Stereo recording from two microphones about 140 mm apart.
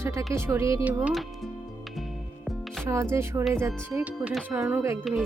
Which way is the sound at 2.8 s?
20° right (ahead or behind).